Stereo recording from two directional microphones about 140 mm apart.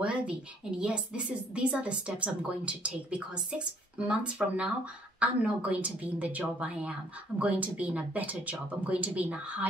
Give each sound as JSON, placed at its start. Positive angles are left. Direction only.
{"t": 0.0, "sound": "speech", "side_deg": -10}